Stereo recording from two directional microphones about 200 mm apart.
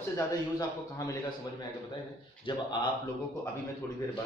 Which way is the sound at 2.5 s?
25° left (ahead or behind).